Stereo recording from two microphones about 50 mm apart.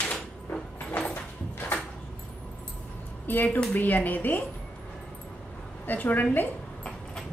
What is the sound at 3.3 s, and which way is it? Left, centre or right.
A woman's voice, left.